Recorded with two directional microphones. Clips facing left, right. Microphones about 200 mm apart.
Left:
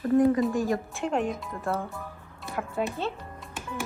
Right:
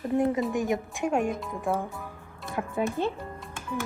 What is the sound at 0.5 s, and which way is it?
A woman's voice, 20° right (ahead or behind).